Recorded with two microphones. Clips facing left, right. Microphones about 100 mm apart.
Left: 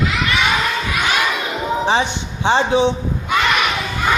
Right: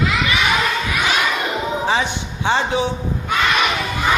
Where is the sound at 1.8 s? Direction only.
25° left (ahead or behind).